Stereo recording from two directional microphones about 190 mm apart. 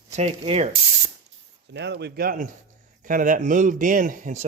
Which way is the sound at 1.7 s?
60° right (ahead or behind).